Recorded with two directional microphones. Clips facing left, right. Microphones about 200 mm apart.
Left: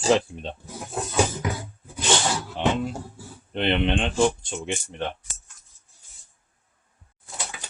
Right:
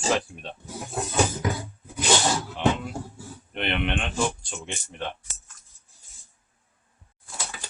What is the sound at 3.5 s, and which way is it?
Speech, 30° left (ahead or behind).